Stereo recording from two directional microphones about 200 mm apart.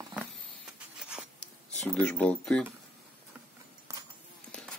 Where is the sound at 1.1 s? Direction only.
Centre (ahead or behind).